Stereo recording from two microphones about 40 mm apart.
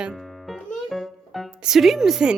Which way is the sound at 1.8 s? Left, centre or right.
Centre.